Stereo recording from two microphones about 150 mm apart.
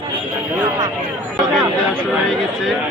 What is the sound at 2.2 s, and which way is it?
Speech, centre (ahead or behind).